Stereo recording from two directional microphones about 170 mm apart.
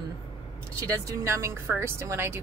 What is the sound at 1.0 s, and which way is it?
Speech, 15° right (ahead or behind).